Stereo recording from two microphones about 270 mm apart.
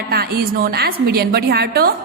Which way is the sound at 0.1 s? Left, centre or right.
Right.